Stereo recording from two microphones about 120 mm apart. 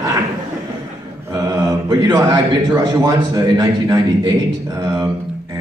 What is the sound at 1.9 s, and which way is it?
A man's voice, 30° right (ahead or behind).